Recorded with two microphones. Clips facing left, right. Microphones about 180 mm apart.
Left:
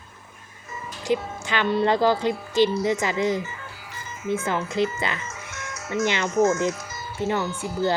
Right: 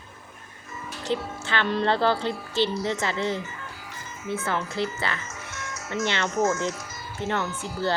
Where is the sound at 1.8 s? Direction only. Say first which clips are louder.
Left 3 dB; 15° left (ahead or behind).